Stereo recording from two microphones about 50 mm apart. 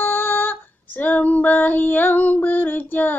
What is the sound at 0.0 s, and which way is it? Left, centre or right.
Female singing, left.